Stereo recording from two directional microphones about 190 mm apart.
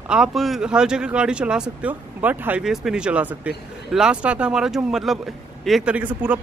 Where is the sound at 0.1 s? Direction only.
Centre (ahead or behind).